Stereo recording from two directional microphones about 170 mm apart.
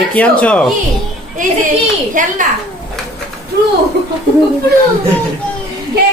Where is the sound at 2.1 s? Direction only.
50° right (ahead or behind).